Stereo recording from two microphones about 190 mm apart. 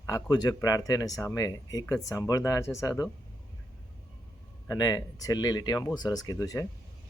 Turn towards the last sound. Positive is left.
turn(degrees=15)  # may be behind; listen again after turning